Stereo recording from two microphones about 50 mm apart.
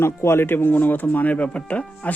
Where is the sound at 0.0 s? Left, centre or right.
Left.